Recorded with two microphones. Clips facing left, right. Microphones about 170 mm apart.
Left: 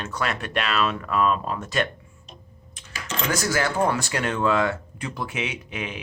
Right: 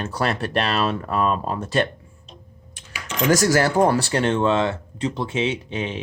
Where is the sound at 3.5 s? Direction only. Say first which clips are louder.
Right 5 dB; 40° right (ahead or behind).